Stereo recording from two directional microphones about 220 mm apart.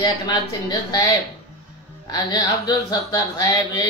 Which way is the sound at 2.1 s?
20° left (ahead or behind).